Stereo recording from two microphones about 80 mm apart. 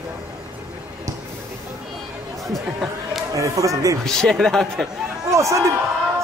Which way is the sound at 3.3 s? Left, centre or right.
Right.